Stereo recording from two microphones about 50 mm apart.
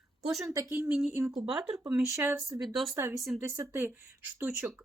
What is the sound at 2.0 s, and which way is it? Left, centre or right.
Speech, right.